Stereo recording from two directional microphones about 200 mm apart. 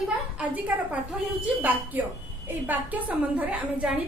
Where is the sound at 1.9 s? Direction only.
10° right (ahead or behind).